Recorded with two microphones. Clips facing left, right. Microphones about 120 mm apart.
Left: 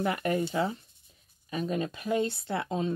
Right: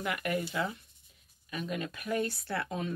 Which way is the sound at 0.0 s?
35° left (ahead or behind).